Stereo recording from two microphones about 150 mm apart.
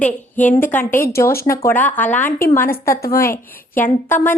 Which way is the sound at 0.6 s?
15° left (ahead or behind).